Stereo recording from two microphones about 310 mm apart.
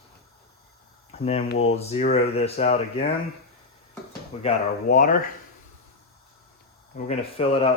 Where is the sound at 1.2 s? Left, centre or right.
Centre.